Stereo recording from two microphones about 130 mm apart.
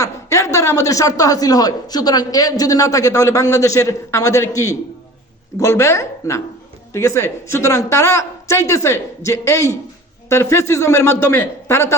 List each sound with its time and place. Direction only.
0.0 s a man's voice: 20° left (ahead or behind)